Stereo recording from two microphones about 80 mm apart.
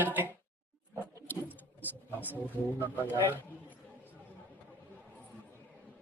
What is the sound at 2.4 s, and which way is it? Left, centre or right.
Speech, left.